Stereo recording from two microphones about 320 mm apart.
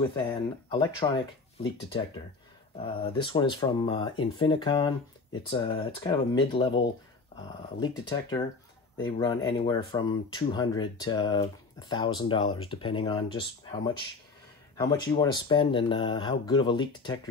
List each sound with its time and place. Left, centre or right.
0.1 s speech: centre
2.8 s speech: centre